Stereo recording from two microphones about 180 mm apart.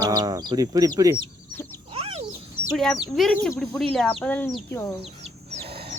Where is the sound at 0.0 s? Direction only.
20° right (ahead or behind).